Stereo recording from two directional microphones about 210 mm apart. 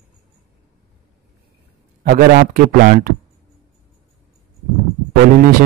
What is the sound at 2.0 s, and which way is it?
Speech, 45° right (ahead or behind).